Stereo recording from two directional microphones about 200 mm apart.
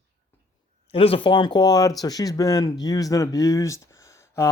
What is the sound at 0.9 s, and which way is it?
Speech, 30° left (ahead or behind).